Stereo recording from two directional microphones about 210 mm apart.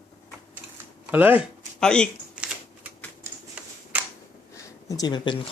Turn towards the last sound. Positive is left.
turn(degrees=20)  # may be behind; listen again after turning